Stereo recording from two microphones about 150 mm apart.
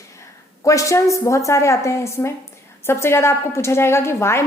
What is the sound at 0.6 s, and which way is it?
A woman's voice, 20° left (ahead or behind).